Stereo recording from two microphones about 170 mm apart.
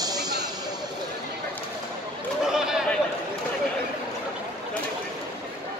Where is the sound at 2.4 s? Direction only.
5° right (ahead or behind).